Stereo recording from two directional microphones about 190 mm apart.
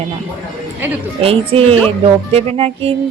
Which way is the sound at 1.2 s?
30° right (ahead or behind).